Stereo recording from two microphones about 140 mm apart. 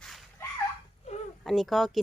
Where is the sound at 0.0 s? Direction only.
Centre (ahead or behind).